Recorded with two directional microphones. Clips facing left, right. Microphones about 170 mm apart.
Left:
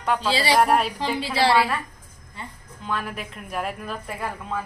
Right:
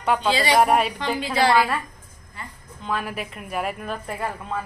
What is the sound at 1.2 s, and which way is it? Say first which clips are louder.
Speech: right 1 dB; 30° left (ahead or behind).